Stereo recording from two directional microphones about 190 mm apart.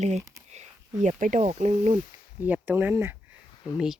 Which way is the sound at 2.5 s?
10° right (ahead or behind).